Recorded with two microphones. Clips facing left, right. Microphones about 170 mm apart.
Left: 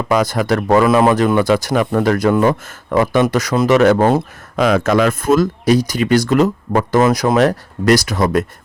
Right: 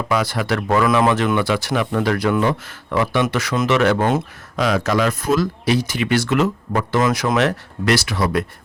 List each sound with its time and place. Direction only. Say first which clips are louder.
0.1 s speech: left 5 dB; 45° left (ahead or behind)
4.5 s speech: left 5 dB; 50° left (ahead or behind)